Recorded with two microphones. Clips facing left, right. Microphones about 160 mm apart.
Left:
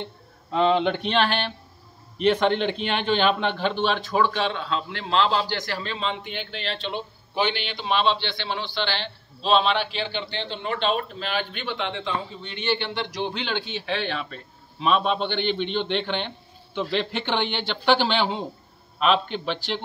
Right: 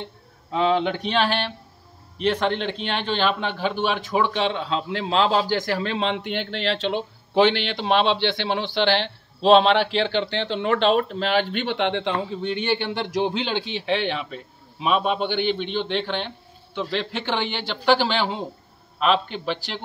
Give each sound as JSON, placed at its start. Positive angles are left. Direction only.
{"t": 0.0, "sound": "a man's voice", "side_deg": 0}
{"t": 7.8, "sound": "a man's voice", "side_deg": -70}
{"t": 12.7, "sound": "speech", "side_deg": -45}
{"t": 13.7, "sound": "a man's voice", "side_deg": -20}